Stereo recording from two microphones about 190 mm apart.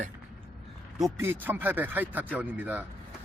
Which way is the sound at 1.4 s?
10° right (ahead or behind).